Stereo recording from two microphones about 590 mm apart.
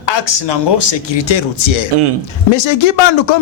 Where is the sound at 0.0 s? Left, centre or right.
Left.